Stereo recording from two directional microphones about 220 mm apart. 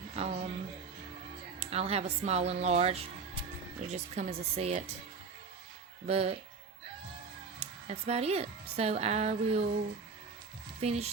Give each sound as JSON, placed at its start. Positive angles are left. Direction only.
{"t": 0.2, "sound": "speech", "side_deg": -30}
{"t": 1.5, "sound": "speech", "side_deg": -30}
{"t": 6.1, "sound": "speech", "side_deg": -30}
{"t": 7.6, "sound": "speech", "side_deg": -30}
{"t": 10.8, "sound": "speech", "side_deg": -30}